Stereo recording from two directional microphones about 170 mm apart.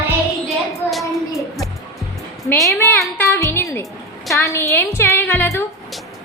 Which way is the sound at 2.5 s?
15° left (ahead or behind).